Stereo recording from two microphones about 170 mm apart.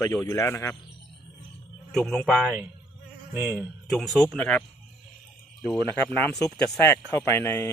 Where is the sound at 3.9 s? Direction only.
Centre (ahead or behind).